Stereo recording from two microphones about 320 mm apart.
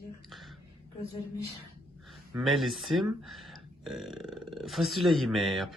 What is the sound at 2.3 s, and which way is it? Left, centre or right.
Speech, centre.